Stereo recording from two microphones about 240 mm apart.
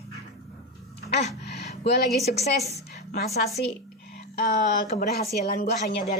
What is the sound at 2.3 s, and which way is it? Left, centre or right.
Speech, left.